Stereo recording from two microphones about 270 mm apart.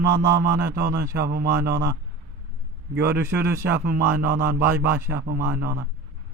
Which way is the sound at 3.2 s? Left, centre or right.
Centre.